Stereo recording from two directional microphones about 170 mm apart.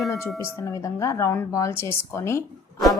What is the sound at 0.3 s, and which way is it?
A woman's voice, 20° left (ahead or behind).